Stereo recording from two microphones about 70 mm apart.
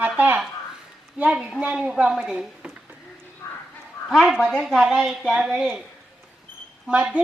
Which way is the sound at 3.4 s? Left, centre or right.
Left.